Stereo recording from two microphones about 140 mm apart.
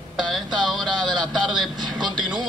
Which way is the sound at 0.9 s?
30° right (ahead or behind).